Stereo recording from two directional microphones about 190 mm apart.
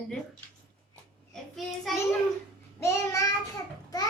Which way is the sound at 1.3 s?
Centre (ahead or behind).